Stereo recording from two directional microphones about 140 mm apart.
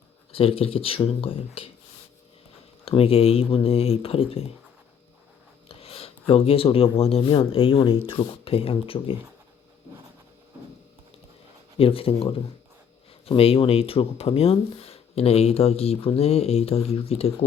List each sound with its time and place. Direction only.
0.3 s speech: 40° left (ahead or behind)
2.8 s speech: 45° left (ahead or behind)
5.6 s speech: 45° left (ahead or behind)
11.8 s speech: 40° left (ahead or behind)